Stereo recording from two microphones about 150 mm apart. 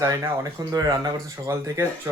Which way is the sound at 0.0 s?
20° right (ahead or behind).